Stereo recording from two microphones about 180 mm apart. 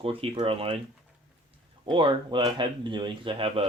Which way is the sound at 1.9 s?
25° right (ahead or behind).